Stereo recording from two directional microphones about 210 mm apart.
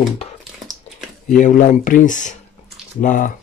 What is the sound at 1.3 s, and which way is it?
Speech, 35° left (ahead or behind).